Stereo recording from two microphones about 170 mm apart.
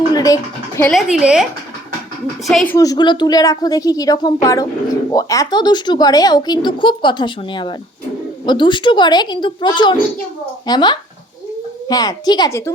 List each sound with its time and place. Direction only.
0.1 s a sound: 20° left (ahead or behind)
0.9 s speech: 5° right (ahead or behind)
2.5 s speech: centre (ahead or behind)
2.7 s speech: 20° left (ahead or behind)